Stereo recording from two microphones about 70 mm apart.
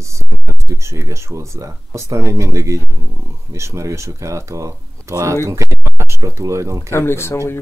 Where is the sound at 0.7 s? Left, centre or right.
Right.